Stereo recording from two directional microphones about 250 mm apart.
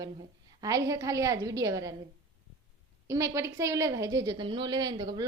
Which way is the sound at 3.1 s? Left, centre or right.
Centre.